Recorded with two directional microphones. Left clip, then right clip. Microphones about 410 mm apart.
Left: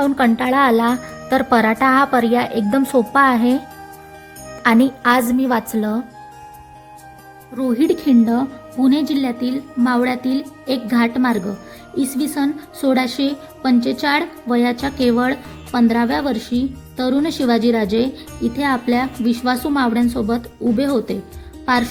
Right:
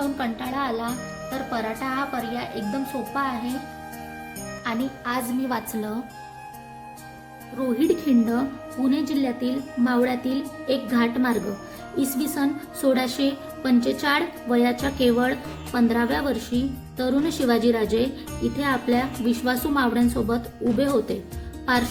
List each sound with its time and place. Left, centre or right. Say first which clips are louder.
0.0 s speech: left 11 dB; left
4.6 s a woman's voice: left 14 dB; left
7.8 s a woman's voice: left 6 dB; centre